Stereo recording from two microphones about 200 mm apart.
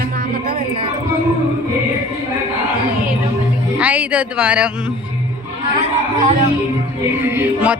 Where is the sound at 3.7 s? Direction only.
5° right (ahead or behind).